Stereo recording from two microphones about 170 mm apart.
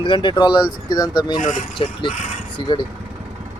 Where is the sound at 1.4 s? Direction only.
50° left (ahead or behind).